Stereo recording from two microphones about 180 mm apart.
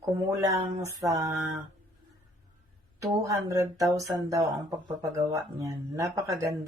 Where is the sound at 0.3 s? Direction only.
20° right (ahead or behind).